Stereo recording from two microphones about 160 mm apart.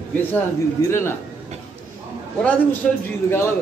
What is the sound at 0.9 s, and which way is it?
Speech, 15° left (ahead or behind).